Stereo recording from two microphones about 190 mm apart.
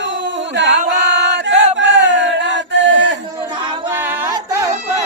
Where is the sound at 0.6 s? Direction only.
75° right (ahead or behind).